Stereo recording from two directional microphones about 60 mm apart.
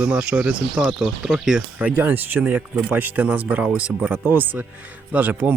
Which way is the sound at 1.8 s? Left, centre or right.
Right.